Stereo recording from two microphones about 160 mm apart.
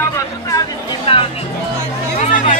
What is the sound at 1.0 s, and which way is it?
Speech, 35° left (ahead or behind).